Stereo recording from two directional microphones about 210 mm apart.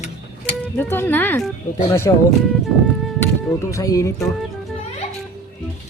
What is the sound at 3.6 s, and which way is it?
Speech, 15° left (ahead or behind).